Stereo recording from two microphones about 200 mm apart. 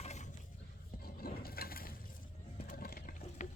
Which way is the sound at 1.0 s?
50° left (ahead or behind).